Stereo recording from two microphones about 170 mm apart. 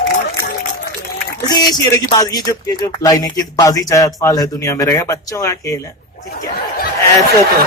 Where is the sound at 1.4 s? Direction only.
25° left (ahead or behind).